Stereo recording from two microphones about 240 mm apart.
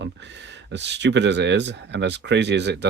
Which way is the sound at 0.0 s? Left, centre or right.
Right.